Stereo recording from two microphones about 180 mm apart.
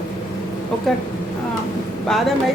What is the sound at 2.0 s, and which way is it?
Speech, centre (ahead or behind).